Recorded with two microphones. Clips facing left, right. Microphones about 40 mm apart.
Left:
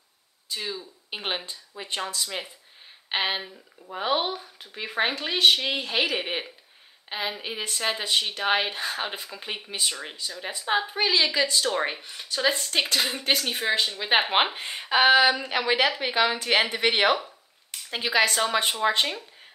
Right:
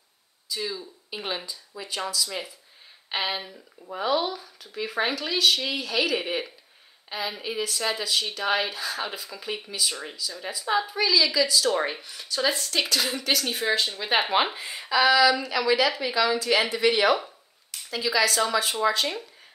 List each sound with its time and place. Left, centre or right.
0.5 s speech: left
1.2 s a woman's voice: left
11.7 s speech: centre
12.0 s speech: left
14.3 s speech: left